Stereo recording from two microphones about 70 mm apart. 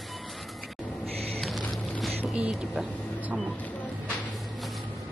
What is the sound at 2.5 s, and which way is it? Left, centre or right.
Speech, centre.